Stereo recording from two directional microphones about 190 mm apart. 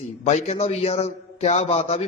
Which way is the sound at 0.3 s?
35° left (ahead or behind).